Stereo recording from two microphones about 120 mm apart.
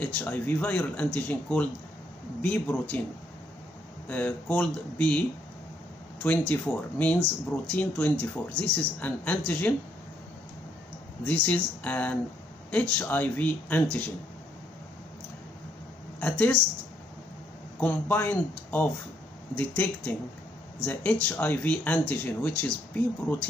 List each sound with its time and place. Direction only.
0.0 s speech: 15° left (ahead or behind)
4.1 s speech: 10° left (ahead or behind)
6.2 s speech: 15° left (ahead or behind)
11.2 s speech: 10° left (ahead or behind)
16.2 s speech: 15° left (ahead or behind)
17.7 s speech: 15° left (ahead or behind)